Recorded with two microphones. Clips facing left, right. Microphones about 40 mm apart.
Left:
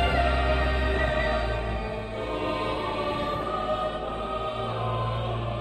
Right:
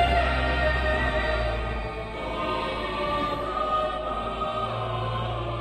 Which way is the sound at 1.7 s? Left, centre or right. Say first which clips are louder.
Left 1 dB; centre.